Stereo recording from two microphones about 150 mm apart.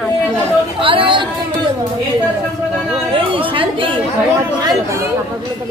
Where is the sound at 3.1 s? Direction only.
35° right (ahead or behind).